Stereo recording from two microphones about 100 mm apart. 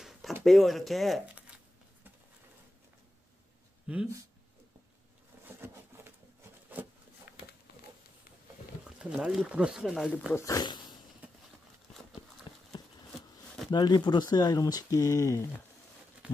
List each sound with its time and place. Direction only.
0.4 s speech: centre (ahead or behind)
3.8 s speech: 10° right (ahead or behind)
5.6 s patter: 25° right (ahead or behind)
6.7 s a sound: 15° right (ahead or behind)
8.8 s a sound: 10° right (ahead or behind)
9.5 s speech: 10° right (ahead or behind)
10.3 s speech: 35° left (ahead or behind)
12.5 s clip-clop: 55° left (ahead or behind)
13.7 s speech: 45° left (ahead or behind)